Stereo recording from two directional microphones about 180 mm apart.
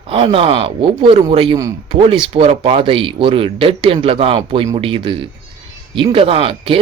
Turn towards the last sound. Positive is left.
turn(degrees=-30)  # may be behind; listen again after turning